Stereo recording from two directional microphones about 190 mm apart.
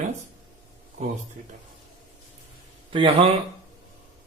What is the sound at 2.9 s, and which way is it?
Speech, 25° right (ahead or behind).